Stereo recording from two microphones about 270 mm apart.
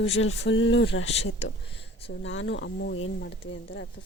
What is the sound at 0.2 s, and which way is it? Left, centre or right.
Speech, left.